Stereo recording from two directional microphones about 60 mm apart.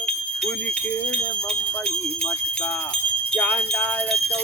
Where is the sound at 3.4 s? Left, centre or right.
Left.